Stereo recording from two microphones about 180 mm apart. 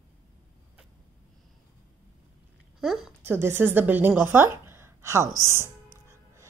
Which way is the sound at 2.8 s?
Centre (ahead or behind).